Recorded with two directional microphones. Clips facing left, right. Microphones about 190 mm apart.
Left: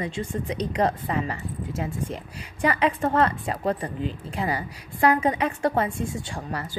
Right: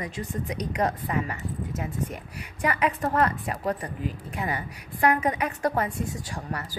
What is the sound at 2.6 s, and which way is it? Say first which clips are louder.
A woman's voice: left 3 dB; 30° left (ahead or behind).